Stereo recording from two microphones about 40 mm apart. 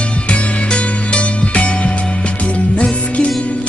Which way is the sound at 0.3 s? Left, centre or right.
Left.